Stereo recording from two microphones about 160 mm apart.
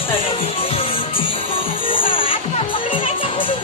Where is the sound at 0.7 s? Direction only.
35° left (ahead or behind).